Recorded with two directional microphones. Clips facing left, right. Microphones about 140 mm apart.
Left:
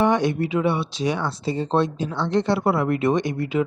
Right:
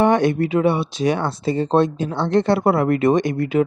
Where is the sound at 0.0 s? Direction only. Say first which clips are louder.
Right 4 dB; 55° right (ahead or behind).